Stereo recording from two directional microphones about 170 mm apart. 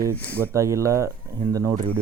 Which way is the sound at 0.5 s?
20° right (ahead or behind).